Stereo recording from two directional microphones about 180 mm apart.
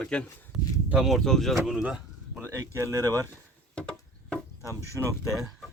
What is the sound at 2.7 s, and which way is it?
Speech, 20° right (ahead or behind).